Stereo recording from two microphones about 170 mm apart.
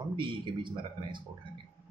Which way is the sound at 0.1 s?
30° right (ahead or behind).